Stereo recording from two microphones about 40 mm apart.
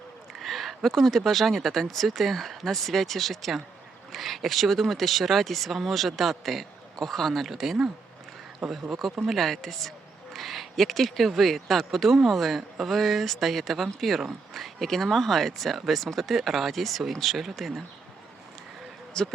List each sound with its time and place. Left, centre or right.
0.3 s a sound: centre
0.9 s speech: centre
7.6 s speech: centre
19.2 s speech: centre